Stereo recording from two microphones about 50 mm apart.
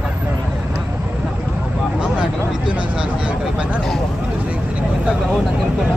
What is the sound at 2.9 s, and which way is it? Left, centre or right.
Speech, right.